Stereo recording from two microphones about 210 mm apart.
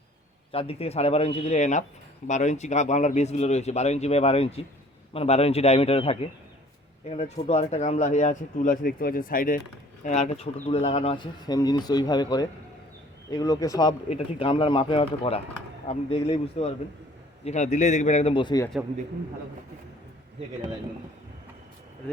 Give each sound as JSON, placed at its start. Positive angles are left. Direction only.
{"t": 0.5, "sound": "speech", "side_deg": 25}